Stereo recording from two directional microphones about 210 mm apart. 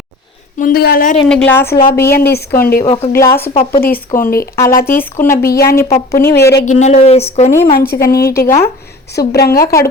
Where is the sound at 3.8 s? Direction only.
45° left (ahead or behind).